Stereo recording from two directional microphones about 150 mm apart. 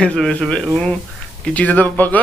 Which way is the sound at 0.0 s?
5° left (ahead or behind).